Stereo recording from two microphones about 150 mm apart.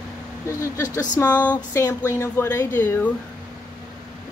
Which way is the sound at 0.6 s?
25° left (ahead or behind).